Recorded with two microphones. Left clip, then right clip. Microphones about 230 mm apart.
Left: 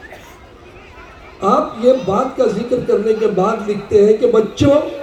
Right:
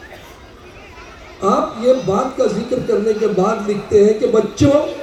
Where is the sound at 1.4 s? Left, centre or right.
Left.